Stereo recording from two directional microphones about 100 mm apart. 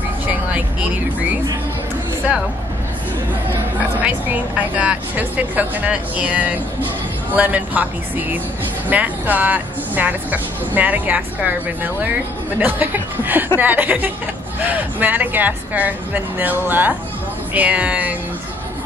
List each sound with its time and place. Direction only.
4.0 s speech: 15° right (ahead or behind)